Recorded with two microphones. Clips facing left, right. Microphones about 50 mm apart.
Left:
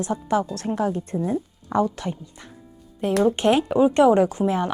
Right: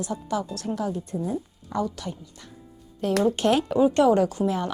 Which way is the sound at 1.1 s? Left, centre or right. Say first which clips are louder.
Left 4 dB; left.